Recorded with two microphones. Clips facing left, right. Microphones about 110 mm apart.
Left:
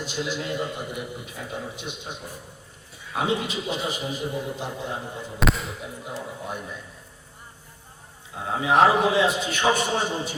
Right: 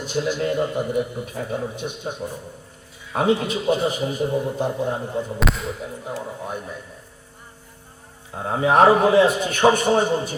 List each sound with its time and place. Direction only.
0.1 s a man's voice: 50° right (ahead or behind)
5.4 s speech: centre (ahead or behind)
8.4 s a man's voice: 45° right (ahead or behind)